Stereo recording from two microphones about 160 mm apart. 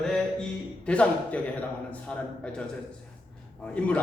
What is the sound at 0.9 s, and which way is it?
Speech, 5° left (ahead or behind).